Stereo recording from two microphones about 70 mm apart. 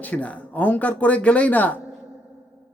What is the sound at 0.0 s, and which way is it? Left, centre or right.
A man's voice, left.